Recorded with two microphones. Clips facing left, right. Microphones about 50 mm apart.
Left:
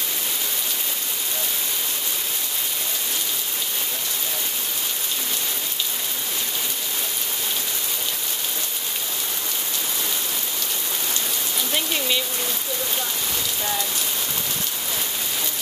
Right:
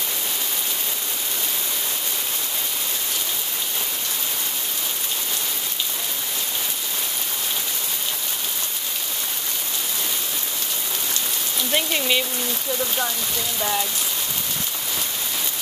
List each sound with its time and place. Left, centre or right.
11.7 s speech: centre